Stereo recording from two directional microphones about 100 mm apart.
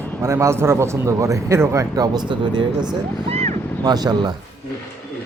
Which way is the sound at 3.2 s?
90° right.